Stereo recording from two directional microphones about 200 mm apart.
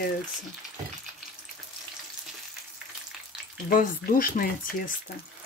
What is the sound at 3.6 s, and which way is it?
Speech, 45° left (ahead or behind).